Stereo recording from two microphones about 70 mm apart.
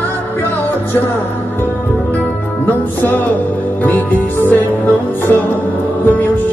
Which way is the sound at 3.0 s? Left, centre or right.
Left.